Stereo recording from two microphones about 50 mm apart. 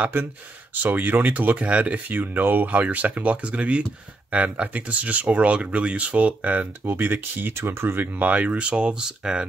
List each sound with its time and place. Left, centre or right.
0.0 s speech: right
6.9 s speech: right; by 9.5 s centre